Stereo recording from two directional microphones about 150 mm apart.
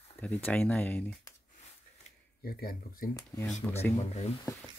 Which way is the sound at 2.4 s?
90° left.